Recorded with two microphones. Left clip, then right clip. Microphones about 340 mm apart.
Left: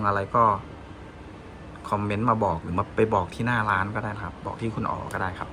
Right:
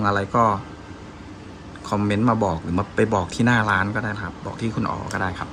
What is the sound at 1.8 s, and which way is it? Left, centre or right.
Speech, centre.